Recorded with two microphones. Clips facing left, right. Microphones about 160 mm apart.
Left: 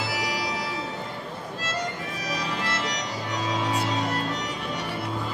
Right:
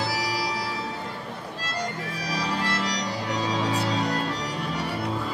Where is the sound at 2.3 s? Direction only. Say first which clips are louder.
Right 3 dB; 35° right (ahead or behind).